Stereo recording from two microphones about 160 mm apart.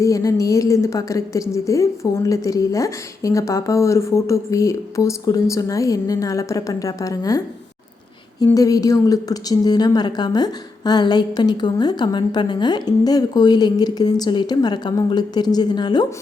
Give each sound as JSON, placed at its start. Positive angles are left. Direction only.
{"t": 0.0, "sound": "a woman's voice", "side_deg": 20}
{"t": 8.4, "sound": "a woman's voice", "side_deg": 20}